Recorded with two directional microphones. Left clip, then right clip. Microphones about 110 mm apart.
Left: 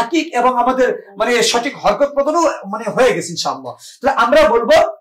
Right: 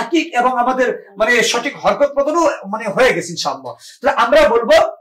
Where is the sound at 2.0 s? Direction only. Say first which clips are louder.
Right 1 dB; 15° left (ahead or behind).